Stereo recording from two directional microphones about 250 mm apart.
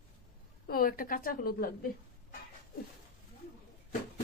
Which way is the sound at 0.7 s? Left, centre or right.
Left.